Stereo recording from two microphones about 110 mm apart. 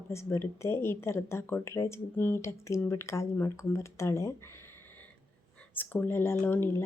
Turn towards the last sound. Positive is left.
turn(degrees=20)  # may be behind; listen again after turning